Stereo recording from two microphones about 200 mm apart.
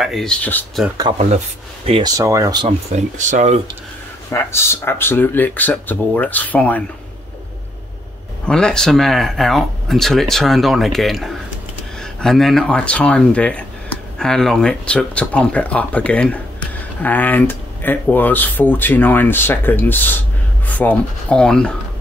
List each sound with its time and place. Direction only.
0.0 s speech: centre (ahead or behind)
1.9 s speech: 25° right (ahead or behind)
2.1 s speech: 15° right (ahead or behind)
2.9 s speech: 35° right (ahead or behind)
4.3 s speech: 10° left (ahead or behind)
8.5 s speech: 5° left (ahead or behind)